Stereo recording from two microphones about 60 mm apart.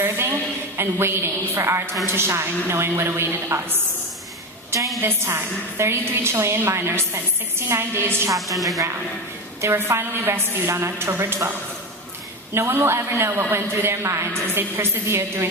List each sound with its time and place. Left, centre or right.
0.0 s a sound: right
0.8 s a woman's voice: right
5.0 s a woman's voice: right
8.5 s speech: centre
9.6 s a woman's voice: right
12.5 s a woman's voice: right
14.5 s a woman's voice: right